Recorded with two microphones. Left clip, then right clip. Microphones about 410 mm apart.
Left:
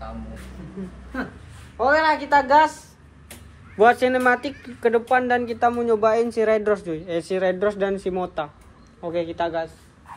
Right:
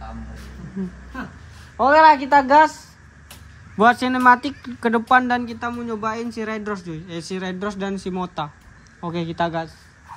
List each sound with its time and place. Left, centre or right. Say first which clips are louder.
1.8 s a woman's voice: right 6 dB; centre